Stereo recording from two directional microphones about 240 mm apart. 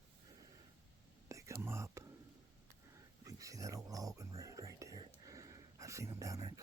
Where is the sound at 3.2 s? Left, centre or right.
Centre.